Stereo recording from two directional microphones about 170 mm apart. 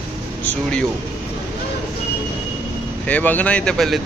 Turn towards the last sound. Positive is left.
turn(degrees=0)  # may be behind; listen again after turning